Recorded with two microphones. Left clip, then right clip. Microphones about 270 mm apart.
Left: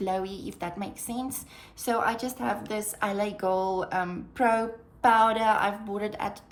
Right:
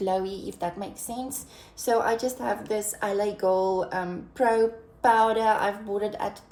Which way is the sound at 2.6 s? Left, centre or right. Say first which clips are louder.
Right 2 dB; left.